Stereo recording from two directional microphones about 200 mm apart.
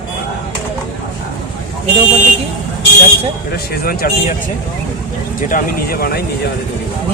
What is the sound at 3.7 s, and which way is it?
Speech, 50° left (ahead or behind).